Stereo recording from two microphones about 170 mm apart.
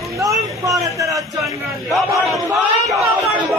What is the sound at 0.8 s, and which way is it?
Speech, 20° right (ahead or behind).